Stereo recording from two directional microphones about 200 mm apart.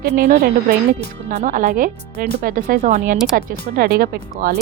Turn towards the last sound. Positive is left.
turn(degrees=-50)  # may be behind; listen again after turning